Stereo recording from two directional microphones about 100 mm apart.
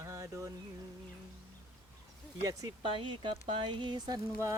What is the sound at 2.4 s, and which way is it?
Speech, 35° right (ahead or behind).